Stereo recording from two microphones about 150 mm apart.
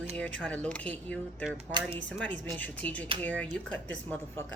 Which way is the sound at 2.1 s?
5° left (ahead or behind).